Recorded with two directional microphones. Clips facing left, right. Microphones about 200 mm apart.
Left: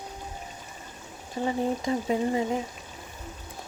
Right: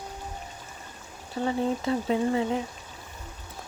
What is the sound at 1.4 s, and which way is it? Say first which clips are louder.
Speech: even; 15° left (ahead or behind).